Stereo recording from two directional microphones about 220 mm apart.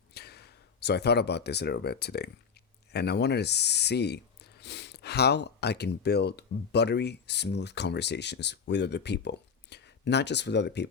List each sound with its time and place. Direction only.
0.1 s speech: 45° left (ahead or behind)